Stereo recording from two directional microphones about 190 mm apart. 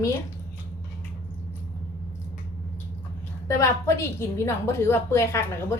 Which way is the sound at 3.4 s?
15° left (ahead or behind).